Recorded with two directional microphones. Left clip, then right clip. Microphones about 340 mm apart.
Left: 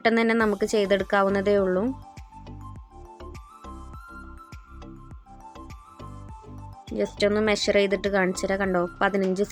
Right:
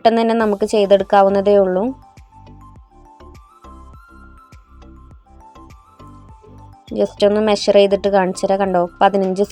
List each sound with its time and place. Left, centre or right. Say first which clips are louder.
0.0 s speech: right 8 dB; centre
3.2 s music: even; centre
6.9 s speech: right 9 dB; centre